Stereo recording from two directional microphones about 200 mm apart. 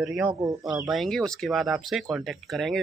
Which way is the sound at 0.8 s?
Centre (ahead or behind).